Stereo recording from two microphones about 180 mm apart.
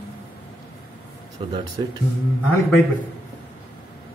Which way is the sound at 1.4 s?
30° right (ahead or behind).